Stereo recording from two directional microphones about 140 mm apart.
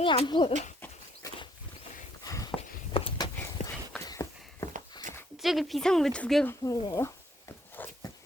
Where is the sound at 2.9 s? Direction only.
40° left (ahead or behind).